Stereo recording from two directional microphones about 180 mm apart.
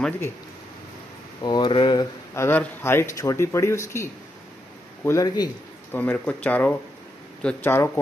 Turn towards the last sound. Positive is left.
turn(degrees=10)  # may be behind; listen again after turning